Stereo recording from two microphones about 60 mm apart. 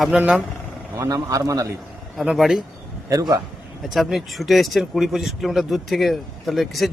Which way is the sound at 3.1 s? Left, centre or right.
Right.